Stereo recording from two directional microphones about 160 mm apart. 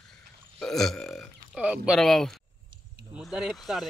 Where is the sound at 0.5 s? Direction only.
Centre (ahead or behind).